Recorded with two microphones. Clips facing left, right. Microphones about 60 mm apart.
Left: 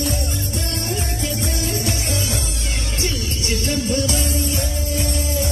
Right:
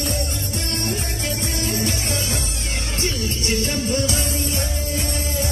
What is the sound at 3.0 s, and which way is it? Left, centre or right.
Music, right.